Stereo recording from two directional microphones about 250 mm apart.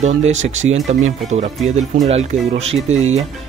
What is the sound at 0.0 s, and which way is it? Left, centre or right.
Speech, right.